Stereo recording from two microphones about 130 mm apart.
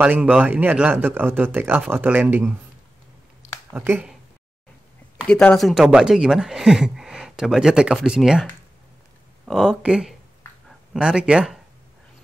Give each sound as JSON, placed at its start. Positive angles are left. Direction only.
{"t": 0.0, "sound": "speech", "side_deg": -10}
{"t": 3.7, "sound": "speech", "side_deg": -15}
{"t": 5.1, "sound": "speech", "side_deg": 10}
{"t": 9.5, "sound": "speech", "side_deg": 0}